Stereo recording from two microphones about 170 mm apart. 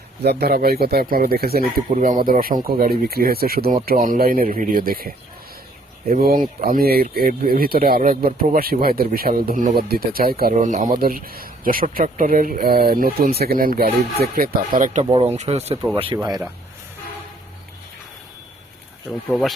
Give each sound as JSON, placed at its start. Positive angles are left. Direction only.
{"t": 0.3, "sound": "speech", "side_deg": -70}
{"t": 15.1, "sound": "speech", "side_deg": -35}
{"t": 16.1, "sound": "speech", "side_deg": -25}
{"t": 19.3, "sound": "speech", "side_deg": 0}